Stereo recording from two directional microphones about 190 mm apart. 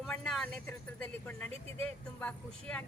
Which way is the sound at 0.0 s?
Centre (ahead or behind).